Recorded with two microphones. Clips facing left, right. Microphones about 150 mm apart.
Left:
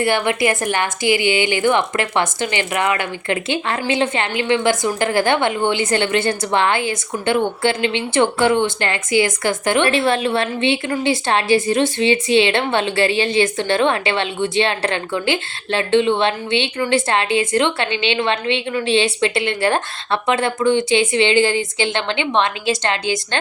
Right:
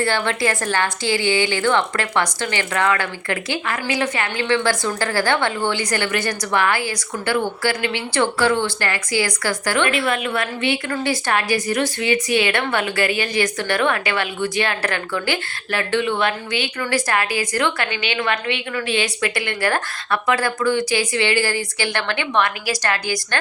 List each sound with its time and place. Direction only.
0.0 s a woman's voice: 20° left (ahead or behind)